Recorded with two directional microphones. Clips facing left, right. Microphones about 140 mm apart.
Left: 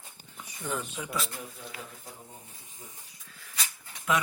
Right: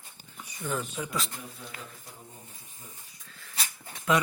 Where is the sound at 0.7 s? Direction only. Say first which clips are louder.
Right 2 dB; 15° left (ahead or behind).